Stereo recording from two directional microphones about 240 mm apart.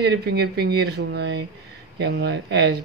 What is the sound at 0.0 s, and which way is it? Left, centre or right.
Speech, right.